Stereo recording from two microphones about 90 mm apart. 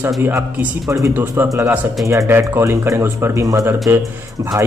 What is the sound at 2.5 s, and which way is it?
A man's voice, 30° right (ahead or behind).